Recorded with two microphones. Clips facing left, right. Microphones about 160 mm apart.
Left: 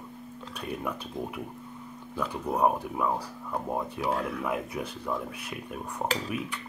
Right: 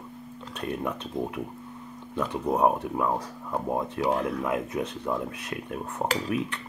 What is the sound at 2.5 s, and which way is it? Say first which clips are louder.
Speech: right 2 dB; centre (ahead or behind).